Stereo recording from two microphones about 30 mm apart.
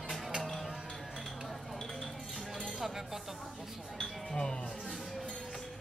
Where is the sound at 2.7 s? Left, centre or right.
Centre.